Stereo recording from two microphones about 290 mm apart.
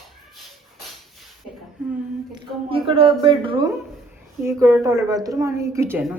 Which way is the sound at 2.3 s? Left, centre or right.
Centre.